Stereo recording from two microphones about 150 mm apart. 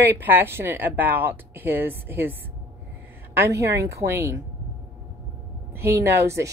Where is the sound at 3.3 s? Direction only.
20° right (ahead or behind).